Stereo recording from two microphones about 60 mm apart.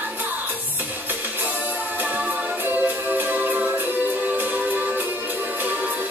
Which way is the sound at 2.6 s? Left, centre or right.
Right.